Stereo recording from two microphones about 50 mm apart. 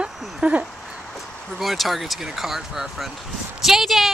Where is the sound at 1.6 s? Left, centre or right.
Centre.